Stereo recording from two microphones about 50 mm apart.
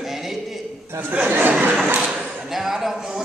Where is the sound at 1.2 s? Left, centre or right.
Right.